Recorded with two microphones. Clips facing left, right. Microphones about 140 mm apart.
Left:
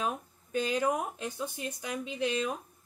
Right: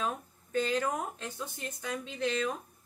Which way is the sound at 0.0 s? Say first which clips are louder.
Left 1 dB; 15° left (ahead or behind).